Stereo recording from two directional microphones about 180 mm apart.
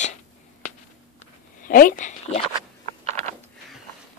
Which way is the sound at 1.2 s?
50° left (ahead or behind).